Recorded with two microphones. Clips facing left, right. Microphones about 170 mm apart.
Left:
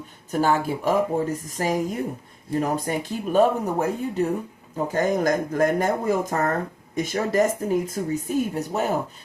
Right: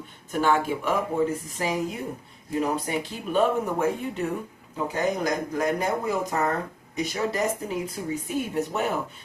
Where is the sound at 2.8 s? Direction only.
45° left (ahead or behind).